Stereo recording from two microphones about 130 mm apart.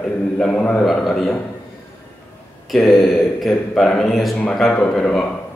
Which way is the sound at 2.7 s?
Centre (ahead or behind).